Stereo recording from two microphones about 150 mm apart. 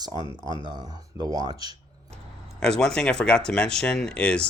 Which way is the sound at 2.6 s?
5° left (ahead or behind).